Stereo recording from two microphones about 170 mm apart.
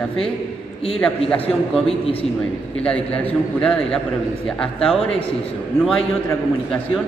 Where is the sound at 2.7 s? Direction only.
5° left (ahead or behind).